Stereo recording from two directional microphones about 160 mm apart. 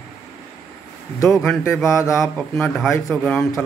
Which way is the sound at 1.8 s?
15° left (ahead or behind).